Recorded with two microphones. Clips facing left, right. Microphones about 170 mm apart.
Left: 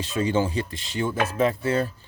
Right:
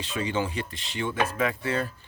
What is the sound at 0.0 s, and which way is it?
Speech, 40° left (ahead or behind).